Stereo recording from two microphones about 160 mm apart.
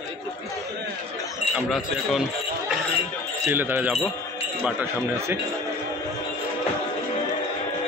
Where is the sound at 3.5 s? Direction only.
10° right (ahead or behind).